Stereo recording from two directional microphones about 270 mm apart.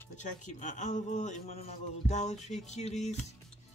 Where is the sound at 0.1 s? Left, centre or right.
Left.